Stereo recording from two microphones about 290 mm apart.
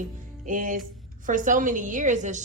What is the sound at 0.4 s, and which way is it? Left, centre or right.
A woman's voice, right.